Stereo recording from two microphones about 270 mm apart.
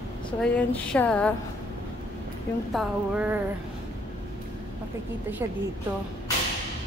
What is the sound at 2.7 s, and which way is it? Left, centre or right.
Speech, centre.